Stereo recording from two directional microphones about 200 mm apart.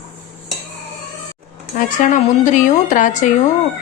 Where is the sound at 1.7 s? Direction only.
40° left (ahead or behind).